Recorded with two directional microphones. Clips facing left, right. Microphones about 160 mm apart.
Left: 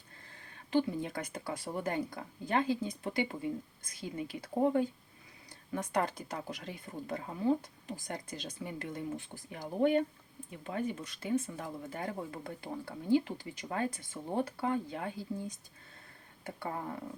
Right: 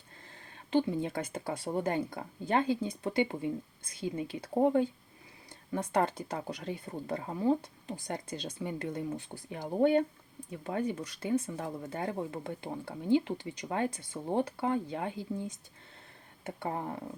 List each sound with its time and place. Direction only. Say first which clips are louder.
0.7 s speech: right 2 dB; 25° right (ahead or behind)